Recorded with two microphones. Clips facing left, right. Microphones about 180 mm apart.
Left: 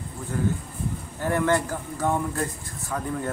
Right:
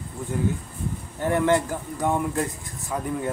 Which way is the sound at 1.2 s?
20° right (ahead or behind).